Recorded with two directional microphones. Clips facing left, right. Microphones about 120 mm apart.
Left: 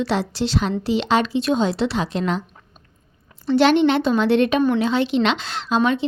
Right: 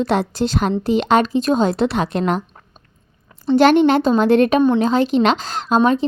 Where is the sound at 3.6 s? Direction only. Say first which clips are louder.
Right 3 dB; 45° right (ahead or behind).